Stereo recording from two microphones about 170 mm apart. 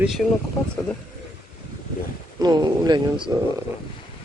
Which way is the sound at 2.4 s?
25° right (ahead or behind).